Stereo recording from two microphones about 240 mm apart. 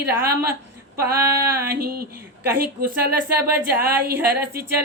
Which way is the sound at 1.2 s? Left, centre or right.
Centre.